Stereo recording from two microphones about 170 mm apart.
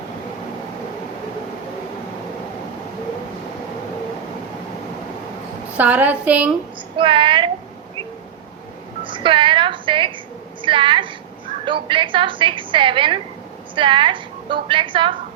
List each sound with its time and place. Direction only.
5.7 s a woman's voice: 10° right (ahead or behind)
6.9 s a woman's voice: 30° right (ahead or behind)
9.0 s music: 30° right (ahead or behind)
10.6 s a woman's voice: 30° right (ahead or behind)